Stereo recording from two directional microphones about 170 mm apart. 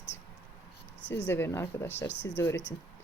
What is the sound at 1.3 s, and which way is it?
Speech, 15° left (ahead or behind).